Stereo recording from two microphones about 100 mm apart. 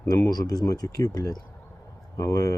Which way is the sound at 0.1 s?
40° left (ahead or behind).